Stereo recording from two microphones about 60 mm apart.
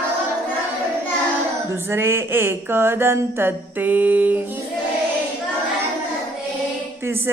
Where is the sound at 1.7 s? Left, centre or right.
Right.